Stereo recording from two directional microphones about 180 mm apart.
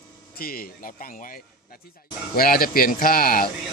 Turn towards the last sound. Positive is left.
turn(degrees=55)  # may be behind; listen again after turning